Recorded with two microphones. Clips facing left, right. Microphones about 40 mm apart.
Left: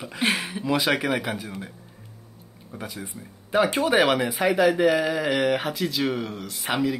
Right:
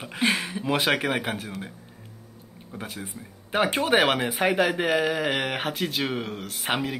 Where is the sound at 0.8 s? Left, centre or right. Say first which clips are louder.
Left 1 dB; right.